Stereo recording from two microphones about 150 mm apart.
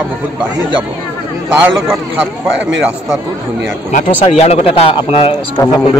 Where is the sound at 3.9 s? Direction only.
45° left (ahead or behind).